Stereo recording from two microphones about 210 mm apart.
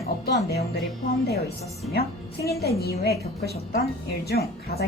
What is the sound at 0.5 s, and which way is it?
Speech, 50° left (ahead or behind).